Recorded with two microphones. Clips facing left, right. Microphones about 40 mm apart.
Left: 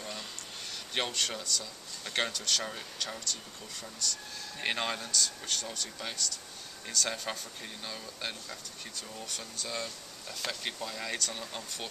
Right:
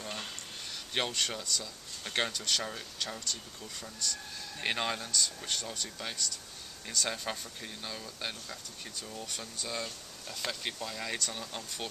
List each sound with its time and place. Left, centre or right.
0.9 s speech: centre